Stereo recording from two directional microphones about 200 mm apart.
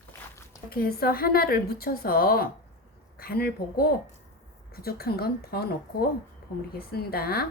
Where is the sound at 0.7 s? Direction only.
50° left (ahead or behind).